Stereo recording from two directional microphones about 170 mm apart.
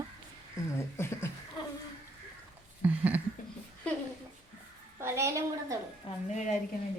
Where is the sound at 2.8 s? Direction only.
10° right (ahead or behind).